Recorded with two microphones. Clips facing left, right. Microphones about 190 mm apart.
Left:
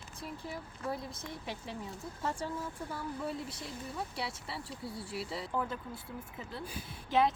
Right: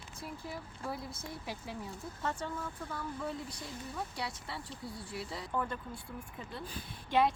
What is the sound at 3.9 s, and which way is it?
A woman's voice, 5° left (ahead or behind).